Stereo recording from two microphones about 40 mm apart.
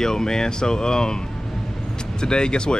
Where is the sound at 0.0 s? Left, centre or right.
Centre.